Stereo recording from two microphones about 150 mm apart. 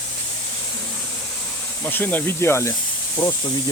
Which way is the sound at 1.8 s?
15° left (ahead or behind).